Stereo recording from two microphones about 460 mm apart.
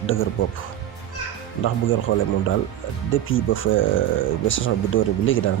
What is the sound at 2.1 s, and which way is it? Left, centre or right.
Speech, left.